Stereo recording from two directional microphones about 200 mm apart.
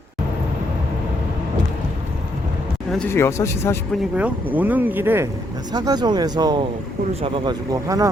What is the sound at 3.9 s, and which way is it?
Speech, 5° right (ahead or behind).